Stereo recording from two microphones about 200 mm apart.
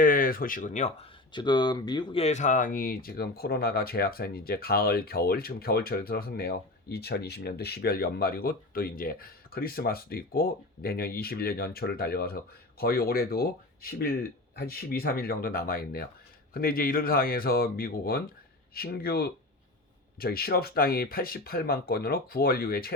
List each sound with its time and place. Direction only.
0.0 s speech: 45° left (ahead or behind)
1.3 s speech: 20° left (ahead or behind); by 23.0 s 50° left (ahead or behind)